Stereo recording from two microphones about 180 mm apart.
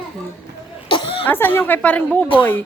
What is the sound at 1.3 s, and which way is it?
Speech, 10° left (ahead or behind).